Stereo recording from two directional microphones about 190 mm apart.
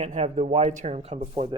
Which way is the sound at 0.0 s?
35° right (ahead or behind).